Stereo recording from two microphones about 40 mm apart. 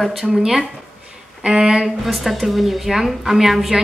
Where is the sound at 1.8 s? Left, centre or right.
Centre.